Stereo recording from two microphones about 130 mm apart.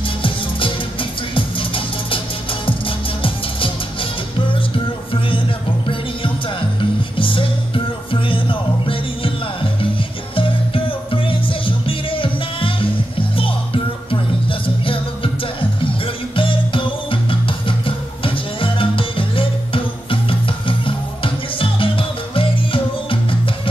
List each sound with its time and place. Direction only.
0.2 s music: 40° left (ahead or behind)
6.8 s music: 40° left (ahead or behind)
14.5 s music: 45° left (ahead or behind)
16.3 s music: 40° left (ahead or behind)